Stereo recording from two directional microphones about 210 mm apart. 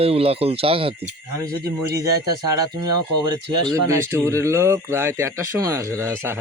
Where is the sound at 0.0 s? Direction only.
30° right (ahead or behind).